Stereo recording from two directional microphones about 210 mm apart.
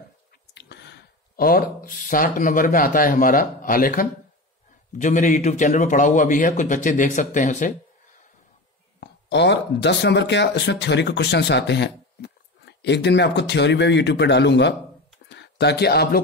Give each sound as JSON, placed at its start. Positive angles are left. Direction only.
{"t": 0.6, "sound": "a man's voice", "side_deg": 55}
{"t": 9.0, "sound": "speech", "side_deg": 55}
{"t": 15.2, "sound": "a sound", "side_deg": 55}